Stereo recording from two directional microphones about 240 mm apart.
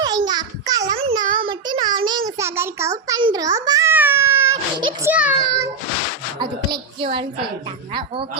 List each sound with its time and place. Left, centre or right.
0.3 s a sound: centre
5.1 s a child's voice: centre
6.4 s a woman's voice: centre